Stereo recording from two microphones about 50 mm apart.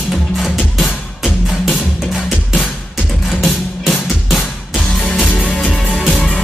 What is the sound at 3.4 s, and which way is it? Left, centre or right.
Music, centre.